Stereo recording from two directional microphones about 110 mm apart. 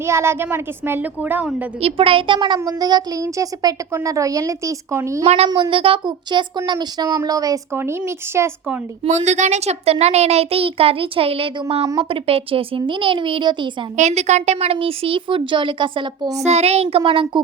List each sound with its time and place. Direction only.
0.0 s a woman's voice: 25° right (ahead or behind)
1.8 s a child's voice: 55° right (ahead or behind); by 5.2 s 25° right (ahead or behind)
5.5 s speech: 45° right (ahead or behind)
6.7 s a child's voice: 40° right (ahead or behind); by 8.4 s 25° right (ahead or behind)
9.0 s a child's voice: 90° right; by 13.7 s 45° right (ahead or behind)
13.9 s speech: 90° right; by 16.3 s 50° right (ahead or behind)
16.4 s speech: 80° right; by 17.4 s 50° right (ahead or behind)